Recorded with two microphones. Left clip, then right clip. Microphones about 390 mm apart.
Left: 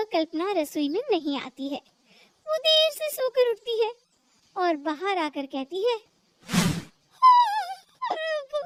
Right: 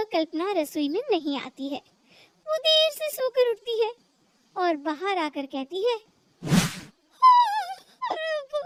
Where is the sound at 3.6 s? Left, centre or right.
Right.